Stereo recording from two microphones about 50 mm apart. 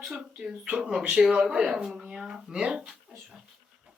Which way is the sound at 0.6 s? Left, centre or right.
Centre.